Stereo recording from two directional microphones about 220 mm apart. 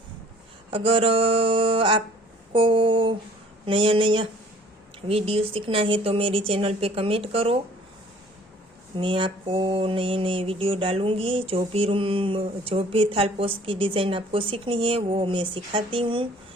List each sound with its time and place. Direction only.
0.7 s mantra: 25° right (ahead or behind)
9.0 s mantra: 25° right (ahead or behind)